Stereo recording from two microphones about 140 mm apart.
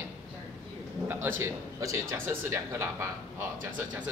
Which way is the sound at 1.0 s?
15° right (ahead or behind).